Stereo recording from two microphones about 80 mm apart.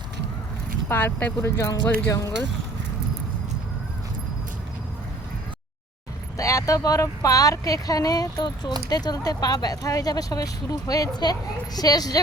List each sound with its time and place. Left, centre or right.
0.9 s speech: left
1.8 s speech: centre
2.0 s speech: left
6.3 s speech: left